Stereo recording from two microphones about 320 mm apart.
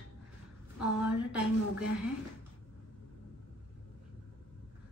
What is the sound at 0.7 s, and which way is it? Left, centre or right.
A woman's voice, centre.